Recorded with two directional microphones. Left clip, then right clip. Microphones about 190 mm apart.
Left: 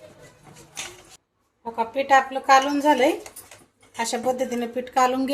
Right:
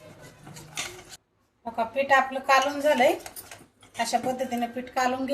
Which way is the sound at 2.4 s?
55° left (ahead or behind).